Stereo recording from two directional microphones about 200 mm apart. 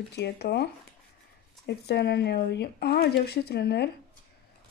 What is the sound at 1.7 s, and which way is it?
Speech, 55° left (ahead or behind).